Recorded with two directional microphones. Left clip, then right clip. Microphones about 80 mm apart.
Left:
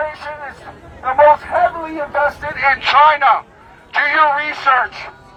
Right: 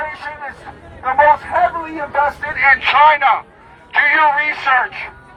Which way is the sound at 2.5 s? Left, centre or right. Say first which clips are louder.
Right 1 dB; left.